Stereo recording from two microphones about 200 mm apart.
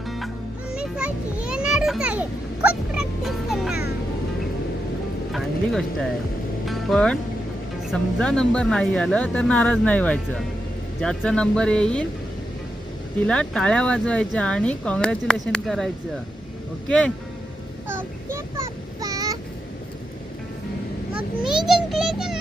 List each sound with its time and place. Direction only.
0.7 s children playing: 5° right (ahead or behind)
2.6 s music: 5° right (ahead or behind)
5.3 s a sound: centre (ahead or behind)
6.7 s music: centre (ahead or behind)
7.9 s speech: 5° left (ahead or behind)
13.2 s speech: 5° left (ahead or behind)
17.8 s child singing: 10° right (ahead or behind)
21.7 s a sound: centre (ahead or behind)